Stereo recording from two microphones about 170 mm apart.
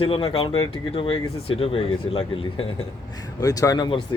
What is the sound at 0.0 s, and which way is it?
Speech, 30° left (ahead or behind).